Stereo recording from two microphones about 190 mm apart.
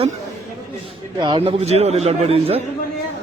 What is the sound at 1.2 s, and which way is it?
A man's voice, 25° right (ahead or behind).